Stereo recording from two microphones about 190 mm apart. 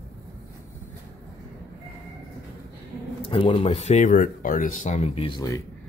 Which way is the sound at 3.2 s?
30° left (ahead or behind).